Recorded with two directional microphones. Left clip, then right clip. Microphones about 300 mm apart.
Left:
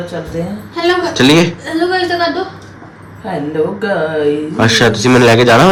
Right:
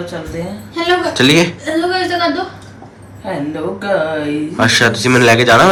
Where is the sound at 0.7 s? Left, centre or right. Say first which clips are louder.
Left 1 dB; centre.